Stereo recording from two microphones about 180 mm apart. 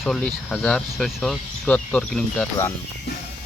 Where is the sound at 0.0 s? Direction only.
Centre (ahead or behind).